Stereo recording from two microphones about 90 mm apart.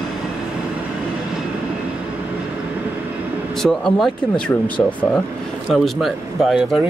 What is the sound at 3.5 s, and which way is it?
Speech, 5° left (ahead or behind).